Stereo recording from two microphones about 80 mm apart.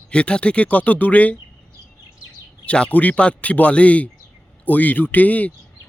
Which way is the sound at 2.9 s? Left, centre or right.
Centre.